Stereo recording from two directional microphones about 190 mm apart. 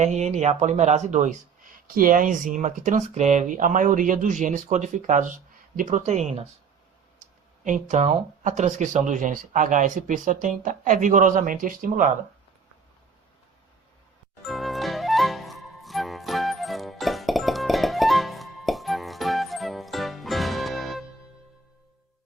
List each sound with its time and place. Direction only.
0.0 s speech: 35° right (ahead or behind)
7.6 s speech: 40° right (ahead or behind)
14.4 s music: centre (ahead or behind)